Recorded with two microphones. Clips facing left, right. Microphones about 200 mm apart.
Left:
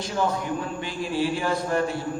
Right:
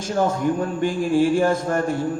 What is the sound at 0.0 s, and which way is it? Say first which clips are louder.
A man's voice: right 5 dB; 45° right (ahead or behind).